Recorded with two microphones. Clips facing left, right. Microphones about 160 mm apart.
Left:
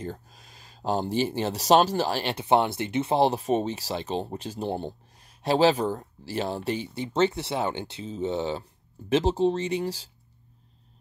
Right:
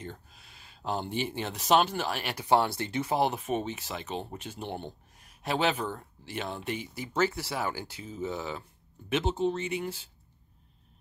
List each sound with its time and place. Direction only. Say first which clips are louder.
0.0 s speech: left 7 dB; 40° left (ahead or behind)